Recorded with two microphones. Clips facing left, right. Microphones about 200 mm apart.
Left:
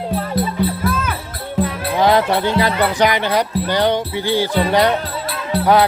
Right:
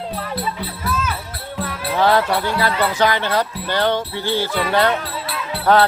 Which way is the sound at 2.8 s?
15° left (ahead or behind).